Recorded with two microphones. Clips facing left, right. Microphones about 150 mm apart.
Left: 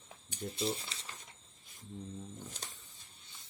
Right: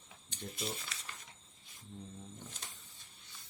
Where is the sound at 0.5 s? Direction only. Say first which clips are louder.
Left 6 dB; 30° left (ahead or behind).